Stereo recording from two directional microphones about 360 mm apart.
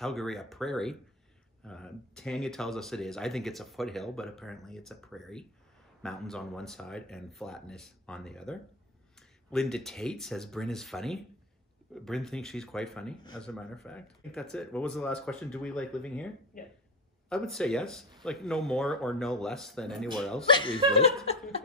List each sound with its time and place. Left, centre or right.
0.0 s speech: centre
17.3 s speech: centre
20.4 s speech: centre
21.3 s a sound: centre